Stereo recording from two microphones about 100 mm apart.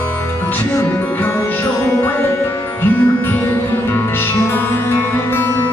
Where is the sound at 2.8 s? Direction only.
20° left (ahead or behind).